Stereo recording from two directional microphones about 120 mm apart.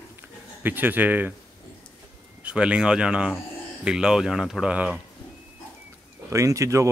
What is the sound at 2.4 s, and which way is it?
A man's voice, 10° right (ahead or behind).